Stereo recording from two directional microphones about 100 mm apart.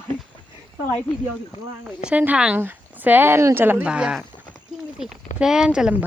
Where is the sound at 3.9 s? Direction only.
10° right (ahead or behind).